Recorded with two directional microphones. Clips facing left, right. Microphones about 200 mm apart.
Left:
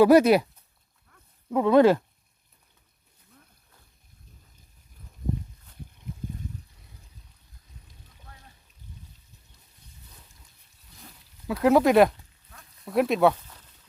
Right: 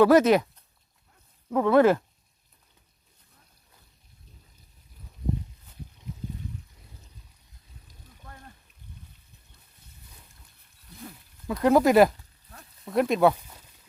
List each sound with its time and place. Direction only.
0.0 s speech: 10° left (ahead or behind)
1.5 s speech: 15° left (ahead or behind)
6.1 s trickle: 50° left (ahead or behind)
8.2 s a sound: 50° right (ahead or behind)
11.4 s speech: 5° left (ahead or behind)